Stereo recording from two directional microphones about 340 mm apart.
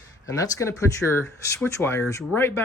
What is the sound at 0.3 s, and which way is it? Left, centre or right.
Speech, centre.